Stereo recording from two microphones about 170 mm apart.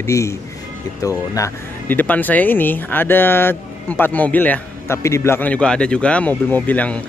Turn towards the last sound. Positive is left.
turn(degrees=10)  # may be behind; listen again after turning